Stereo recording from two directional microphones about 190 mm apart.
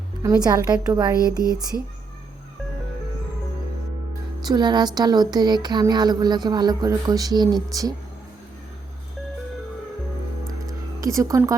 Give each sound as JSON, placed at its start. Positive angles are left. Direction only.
{"t": 0.2, "sound": "a woman's voice", "side_deg": -20}
{"t": 4.4, "sound": "a woman's voice", "side_deg": -20}
{"t": 11.0, "sound": "a woman's voice", "side_deg": -15}